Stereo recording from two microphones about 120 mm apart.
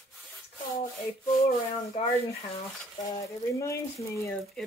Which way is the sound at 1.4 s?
55° left (ahead or behind).